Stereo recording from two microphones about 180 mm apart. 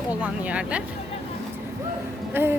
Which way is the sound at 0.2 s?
5° right (ahead or behind).